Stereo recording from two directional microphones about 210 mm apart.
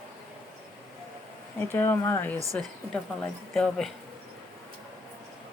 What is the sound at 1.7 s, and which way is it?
Speech, 10° left (ahead or behind).